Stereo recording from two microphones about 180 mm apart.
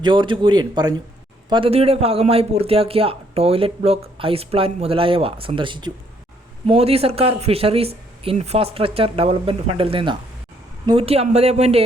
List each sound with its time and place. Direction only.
0.0 s a man's voice: 25° right (ahead or behind)